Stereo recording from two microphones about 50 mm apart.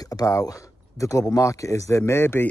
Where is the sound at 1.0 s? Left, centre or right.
Left.